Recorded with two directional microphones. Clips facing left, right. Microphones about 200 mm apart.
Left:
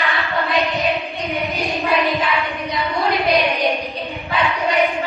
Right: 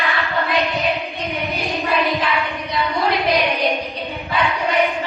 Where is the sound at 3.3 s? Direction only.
Centre (ahead or behind).